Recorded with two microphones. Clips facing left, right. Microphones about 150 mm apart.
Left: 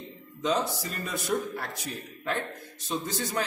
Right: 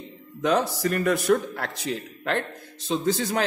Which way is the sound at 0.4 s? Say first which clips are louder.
Right 5 dB; 70° right (ahead or behind).